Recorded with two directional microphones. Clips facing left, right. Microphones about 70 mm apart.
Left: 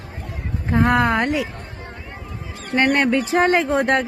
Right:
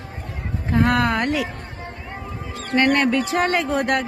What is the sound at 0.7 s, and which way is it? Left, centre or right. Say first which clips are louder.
Speech: left 2 dB; left.